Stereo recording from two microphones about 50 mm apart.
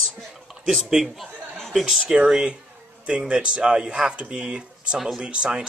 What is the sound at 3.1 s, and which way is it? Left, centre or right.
Speech, centre.